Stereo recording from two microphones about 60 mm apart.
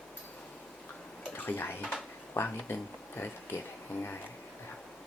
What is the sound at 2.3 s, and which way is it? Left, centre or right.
Speech, left.